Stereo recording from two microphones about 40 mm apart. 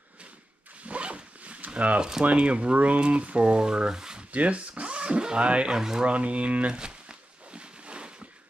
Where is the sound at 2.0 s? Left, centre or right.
Centre.